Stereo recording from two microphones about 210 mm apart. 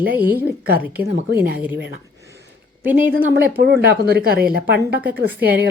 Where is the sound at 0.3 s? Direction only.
45° right (ahead or behind).